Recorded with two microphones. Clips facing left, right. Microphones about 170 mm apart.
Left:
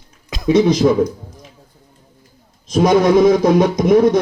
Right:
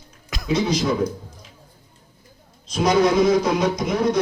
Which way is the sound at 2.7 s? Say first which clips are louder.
Left 6 dB; 50° left (ahead or behind).